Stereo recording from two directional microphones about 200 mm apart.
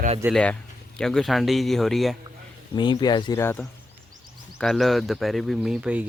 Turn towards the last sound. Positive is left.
turn(degrees=-5)  # may be behind; listen again after turning